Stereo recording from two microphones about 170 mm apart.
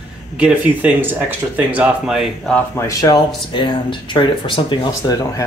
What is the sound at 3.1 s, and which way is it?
Speech, 25° left (ahead or behind).